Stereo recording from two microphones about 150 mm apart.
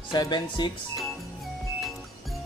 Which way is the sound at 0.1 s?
30° left (ahead or behind).